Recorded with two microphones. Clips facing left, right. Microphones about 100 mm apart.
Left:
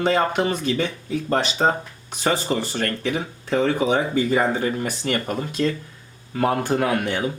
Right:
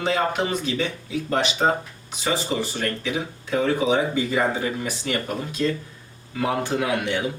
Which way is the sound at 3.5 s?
40° left (ahead or behind).